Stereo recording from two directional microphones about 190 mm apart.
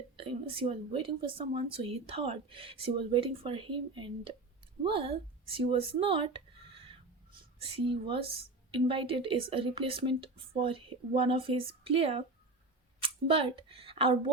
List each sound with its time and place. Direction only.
0.2 s a woman's voice: 30° right (ahead or behind)
6.0 s a sound: 30° right (ahead or behind)
7.6 s a woman's voice: 25° right (ahead or behind)